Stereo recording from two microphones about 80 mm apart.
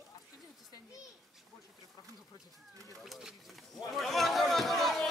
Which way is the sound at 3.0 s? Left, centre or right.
Centre.